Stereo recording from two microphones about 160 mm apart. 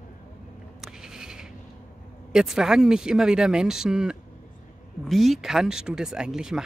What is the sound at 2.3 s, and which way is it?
Speech, centre (ahead or behind).